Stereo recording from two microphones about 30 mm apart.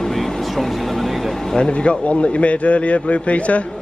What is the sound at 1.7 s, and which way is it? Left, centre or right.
A man's voice, left.